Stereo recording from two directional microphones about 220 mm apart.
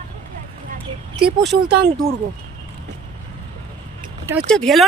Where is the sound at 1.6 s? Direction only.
50° right (ahead or behind).